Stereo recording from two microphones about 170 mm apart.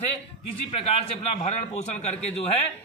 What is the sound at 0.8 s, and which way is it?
A man's voice, 40° left (ahead or behind).